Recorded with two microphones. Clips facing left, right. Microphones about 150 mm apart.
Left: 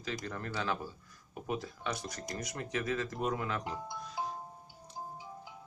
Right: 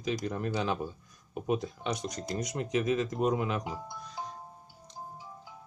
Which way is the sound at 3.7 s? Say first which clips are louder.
Even; centre (ahead or behind).